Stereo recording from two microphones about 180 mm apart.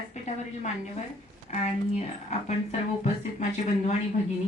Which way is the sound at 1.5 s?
40° left (ahead or behind).